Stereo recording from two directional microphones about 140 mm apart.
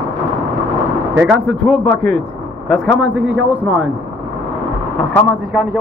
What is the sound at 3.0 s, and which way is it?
Speech, 10° right (ahead or behind).